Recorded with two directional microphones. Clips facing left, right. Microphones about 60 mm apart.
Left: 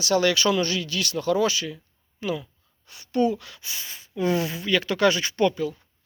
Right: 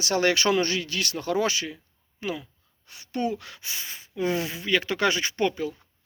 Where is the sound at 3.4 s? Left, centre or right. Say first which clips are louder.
Right 1 dB; right.